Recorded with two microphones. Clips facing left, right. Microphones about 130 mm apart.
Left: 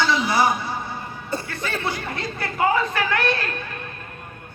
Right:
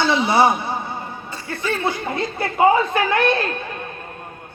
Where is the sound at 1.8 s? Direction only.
20° right (ahead or behind).